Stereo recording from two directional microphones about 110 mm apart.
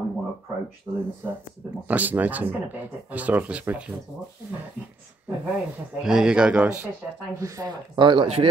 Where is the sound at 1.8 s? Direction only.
15° right (ahead or behind).